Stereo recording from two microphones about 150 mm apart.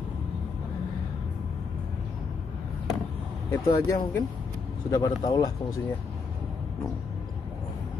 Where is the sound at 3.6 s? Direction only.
20° left (ahead or behind).